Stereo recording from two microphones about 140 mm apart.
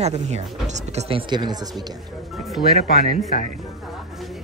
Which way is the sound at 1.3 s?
30° right (ahead or behind).